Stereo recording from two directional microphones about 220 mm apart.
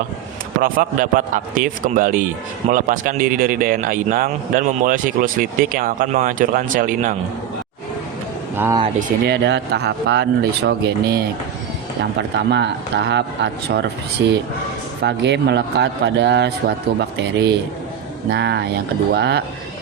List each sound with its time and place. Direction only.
0.6 s a man's voice: 40° right (ahead or behind)
8.5 s speech: 10° right (ahead or behind)
9.2 s a man's voice: 50° right (ahead or behind)
12.5 s a man's voice: 50° right (ahead or behind)